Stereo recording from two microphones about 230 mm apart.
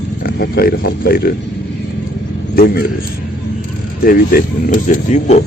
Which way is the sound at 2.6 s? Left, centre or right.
Left.